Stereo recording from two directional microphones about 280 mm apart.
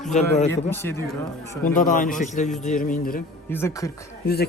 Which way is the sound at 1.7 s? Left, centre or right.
Left.